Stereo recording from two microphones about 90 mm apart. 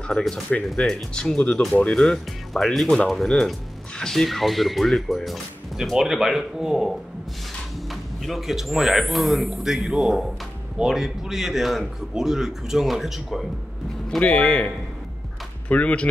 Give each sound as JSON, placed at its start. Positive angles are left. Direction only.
{"t": 0.1, "sound": "speech", "side_deg": 5}
{"t": 7.9, "sound": "speech", "side_deg": 0}
{"t": 14.2, "sound": "speech", "side_deg": 15}
{"t": 15.7, "sound": "speech", "side_deg": 15}